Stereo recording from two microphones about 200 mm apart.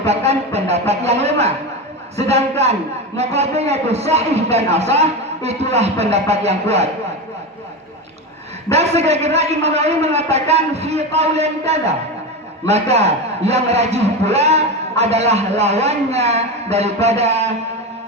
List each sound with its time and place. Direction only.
0.0 s a man's voice: 30° right (ahead or behind)
8.7 s a man's voice: 30° right (ahead or behind)